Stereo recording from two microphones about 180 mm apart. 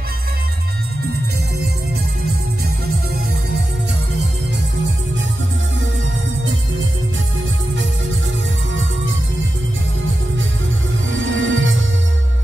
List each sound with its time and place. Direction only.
11.1 s music: 90° right